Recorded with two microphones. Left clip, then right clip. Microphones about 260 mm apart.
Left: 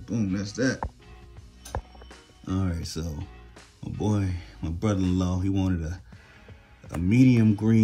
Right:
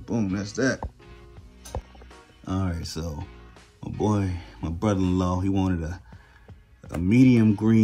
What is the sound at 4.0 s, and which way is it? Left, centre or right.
Speech, centre.